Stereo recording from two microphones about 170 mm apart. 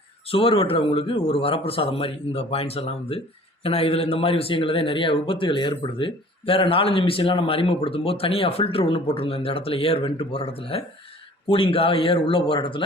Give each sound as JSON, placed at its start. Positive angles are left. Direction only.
{"t": 0.3, "sound": "a man's voice", "side_deg": 30}